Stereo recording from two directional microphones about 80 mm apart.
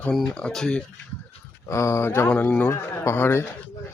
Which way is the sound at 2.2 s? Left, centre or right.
Left.